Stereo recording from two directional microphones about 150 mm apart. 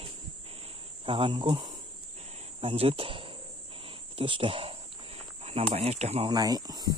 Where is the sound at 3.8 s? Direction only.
35° right (ahead or behind).